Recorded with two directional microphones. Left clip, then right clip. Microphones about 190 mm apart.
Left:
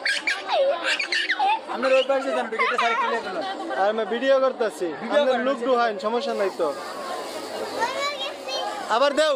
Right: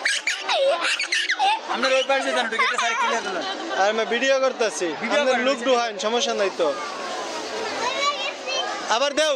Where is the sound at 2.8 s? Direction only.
50° right (ahead or behind).